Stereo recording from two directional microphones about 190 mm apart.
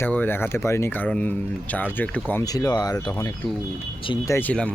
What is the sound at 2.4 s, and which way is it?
Speech, 20° left (ahead or behind).